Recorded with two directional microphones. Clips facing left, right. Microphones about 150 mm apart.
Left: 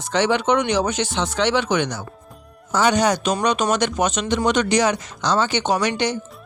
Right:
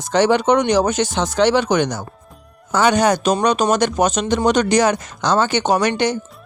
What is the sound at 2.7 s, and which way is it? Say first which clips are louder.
Speech: right 3 dB; 55° right (ahead or behind).